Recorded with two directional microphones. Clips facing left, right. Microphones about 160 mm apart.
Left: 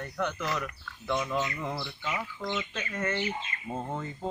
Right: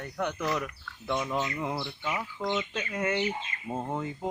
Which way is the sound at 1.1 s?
25° right (ahead or behind).